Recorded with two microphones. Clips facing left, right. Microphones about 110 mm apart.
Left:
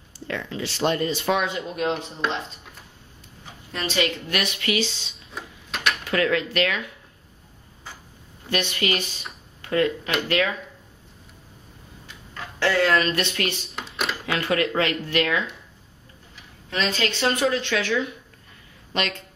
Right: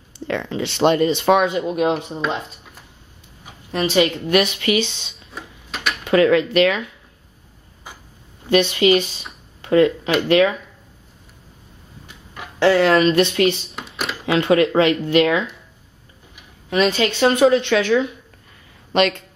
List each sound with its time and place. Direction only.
0.6 s speech: 65° right (ahead or behind)
1.5 s speech: 15° right (ahead or behind)
2.2 s speech: 5° right (ahead or behind)
3.4 s speech: 15° right (ahead or behind)
4.7 s speech: 60° right (ahead or behind)
5.1 s a sound: centre (ahead or behind)
6.0 s speech: 20° right (ahead or behind)
8.5 s speech: 20° right (ahead or behind)
12.4 s speech: 20° right (ahead or behind)
13.7 s a sound: centre (ahead or behind)
14.2 s speech: 20° right (ahead or behind)